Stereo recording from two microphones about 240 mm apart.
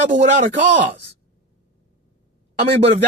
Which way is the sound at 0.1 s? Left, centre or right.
Right.